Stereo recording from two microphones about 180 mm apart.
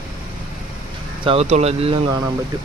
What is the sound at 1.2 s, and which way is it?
Speech, 35° right (ahead or behind).